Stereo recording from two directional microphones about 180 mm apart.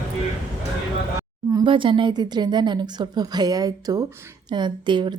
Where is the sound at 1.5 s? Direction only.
25° right (ahead or behind).